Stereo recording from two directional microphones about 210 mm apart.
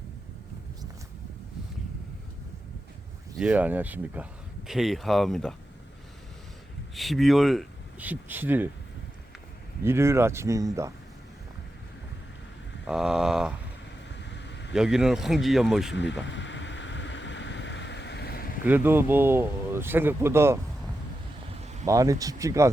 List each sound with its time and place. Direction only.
3.3 s speech: 5° right (ahead or behind)
6.9 s speech: centre (ahead or behind)
9.8 s speech: 10° right (ahead or behind)
12.8 s speech: centre (ahead or behind)
14.2 s vehicle: 55° left (ahead or behind)
14.7 s speech: centre (ahead or behind)
16.2 s boat: 60° left (ahead or behind)
18.6 s speech: 10° right (ahead or behind)
21.8 s speech: 15° right (ahead or behind)